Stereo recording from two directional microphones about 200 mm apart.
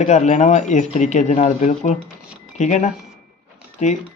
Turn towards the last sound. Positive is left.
turn(degrees=35)  # may be behind; listen again after turning